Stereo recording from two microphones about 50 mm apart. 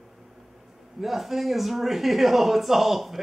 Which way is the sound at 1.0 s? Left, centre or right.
Centre.